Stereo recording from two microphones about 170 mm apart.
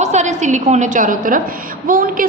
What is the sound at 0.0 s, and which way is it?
A woman's voice, 45° right (ahead or behind).